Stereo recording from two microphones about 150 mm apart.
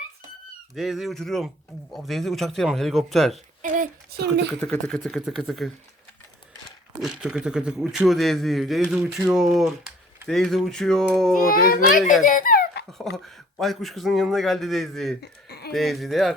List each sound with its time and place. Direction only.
0.8 s a man's voice: centre (ahead or behind)
3.6 s speech: 75° right (ahead or behind)
4.6 s a man's voice: 5° left (ahead or behind)
7.0 s a man's voice: 5° right (ahead or behind)
11.3 s a child's voice: 75° left (ahead or behind)
12.2 s dog: 65° left (ahead or behind); by 12.8 s 80° left
12.9 s a man's voice: centre (ahead or behind)
15.2 s a sound: 90° left
15.7 s a man's voice: centre (ahead or behind)